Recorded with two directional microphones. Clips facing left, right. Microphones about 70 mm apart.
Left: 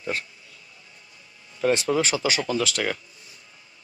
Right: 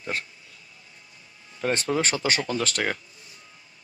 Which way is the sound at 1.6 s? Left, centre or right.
Right.